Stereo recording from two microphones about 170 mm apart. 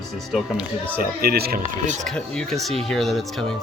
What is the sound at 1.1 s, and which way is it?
Speech, 65° right (ahead or behind).